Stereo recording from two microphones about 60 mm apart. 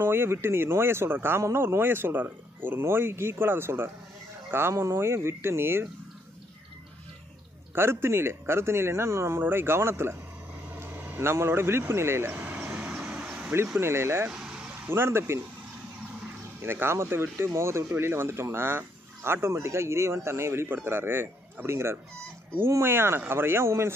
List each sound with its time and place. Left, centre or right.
0.0 s speech: right
7.7 s speech: right
10.8 s vehicle: right
11.1 s vehicle: right; by 13.5 s centre
13.7 s speech: right
14.3 s vehicle: centre
14.9 s speech: right
16.6 s speech: right
20.6 s speech: right